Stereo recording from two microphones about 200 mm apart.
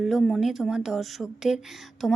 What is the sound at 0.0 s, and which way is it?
Speech, centre (ahead or behind).